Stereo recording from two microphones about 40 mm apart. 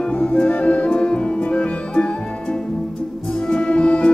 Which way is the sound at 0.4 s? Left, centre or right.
Left.